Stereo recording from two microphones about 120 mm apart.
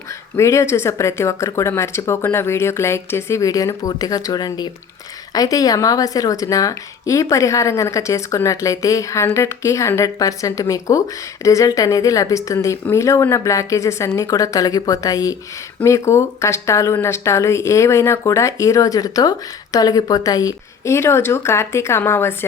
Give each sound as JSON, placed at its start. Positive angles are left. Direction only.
{"t": 0.3, "sound": "speech", "side_deg": 25}